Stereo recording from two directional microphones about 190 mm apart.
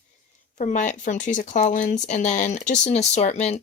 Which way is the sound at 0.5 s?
40° left (ahead or behind).